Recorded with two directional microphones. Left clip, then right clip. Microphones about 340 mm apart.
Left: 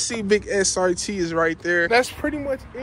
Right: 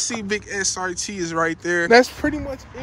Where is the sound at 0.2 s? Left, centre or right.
Centre.